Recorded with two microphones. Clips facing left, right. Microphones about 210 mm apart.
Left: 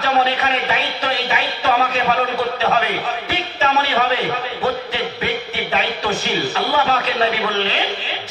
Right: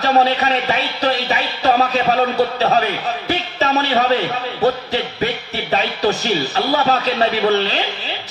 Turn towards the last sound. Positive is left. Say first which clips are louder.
# right 4 dB
turn(degrees=-40)  # may be behind; listen again after turning